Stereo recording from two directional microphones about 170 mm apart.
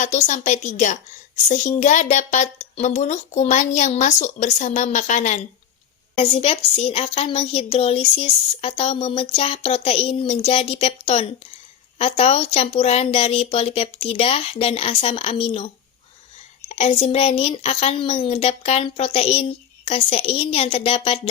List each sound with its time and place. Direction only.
0.0 s a woman's voice: 45° left (ahead or behind)